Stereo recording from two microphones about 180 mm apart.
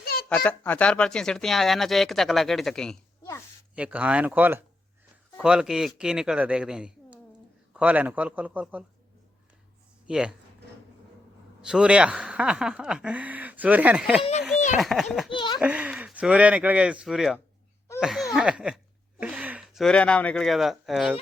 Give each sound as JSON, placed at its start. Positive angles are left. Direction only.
{"t": 0.0, "sound": "a sound", "side_deg": 60}
{"t": 0.3, "sound": "speech", "side_deg": 10}
{"t": 10.1, "sound": "speech", "side_deg": -5}
{"t": 11.6, "sound": "speech", "side_deg": -5}
{"t": 15.3, "sound": "a child's voice", "side_deg": 25}
{"t": 15.5, "sound": "speech", "side_deg": -5}